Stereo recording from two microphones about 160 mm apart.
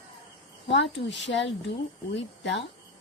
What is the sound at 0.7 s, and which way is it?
Speech, 90° left.